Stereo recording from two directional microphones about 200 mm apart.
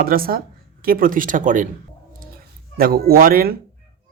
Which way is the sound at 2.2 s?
50° right (ahead or behind).